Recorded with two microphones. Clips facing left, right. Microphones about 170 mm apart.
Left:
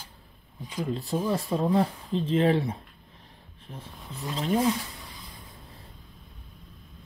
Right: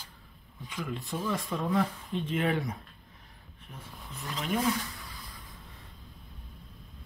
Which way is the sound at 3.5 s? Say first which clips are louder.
Left 4 dB; 30° left (ahead or behind).